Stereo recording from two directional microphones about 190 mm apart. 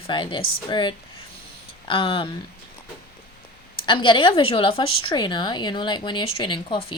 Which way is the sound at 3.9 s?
25° left (ahead or behind).